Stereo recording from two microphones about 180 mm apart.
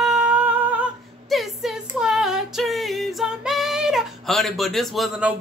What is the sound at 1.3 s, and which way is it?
Female singing, centre (ahead or behind).